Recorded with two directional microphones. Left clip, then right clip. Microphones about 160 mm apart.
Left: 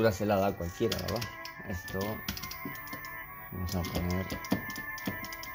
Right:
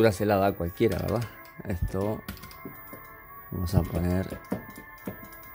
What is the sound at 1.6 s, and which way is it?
Speech, 55° right (ahead or behind).